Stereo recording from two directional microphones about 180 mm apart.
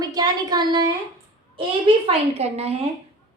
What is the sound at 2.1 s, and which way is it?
Speech, 35° right (ahead or behind).